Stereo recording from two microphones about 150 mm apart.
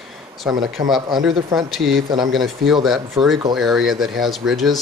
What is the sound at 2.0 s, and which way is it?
Speech, 30° right (ahead or behind).